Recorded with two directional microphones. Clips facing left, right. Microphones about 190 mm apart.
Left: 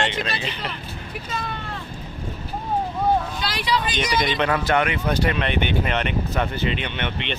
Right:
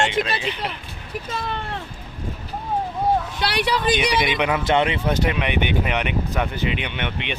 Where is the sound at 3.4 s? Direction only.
50° right (ahead or behind).